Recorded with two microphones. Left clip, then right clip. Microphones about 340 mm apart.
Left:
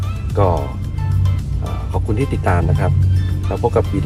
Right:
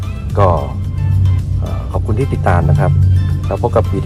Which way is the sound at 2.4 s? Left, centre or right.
Centre.